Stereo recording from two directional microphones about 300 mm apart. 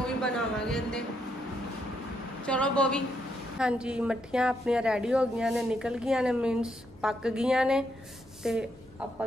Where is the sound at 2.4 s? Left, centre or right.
Centre.